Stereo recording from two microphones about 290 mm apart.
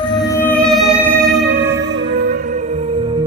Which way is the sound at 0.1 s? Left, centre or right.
Centre.